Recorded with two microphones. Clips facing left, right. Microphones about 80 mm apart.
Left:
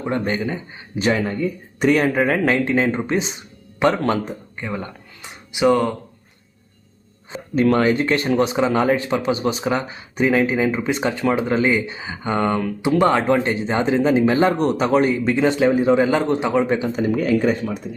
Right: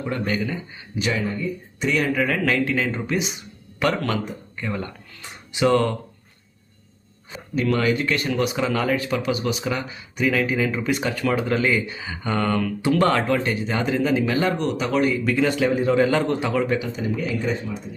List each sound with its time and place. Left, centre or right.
0.0 s speech: left
1.3 s speech: left; by 6.0 s centre
7.5 s speech: left
16.9 s speech: left